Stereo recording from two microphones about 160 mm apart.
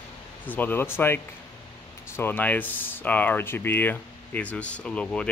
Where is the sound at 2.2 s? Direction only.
10° left (ahead or behind).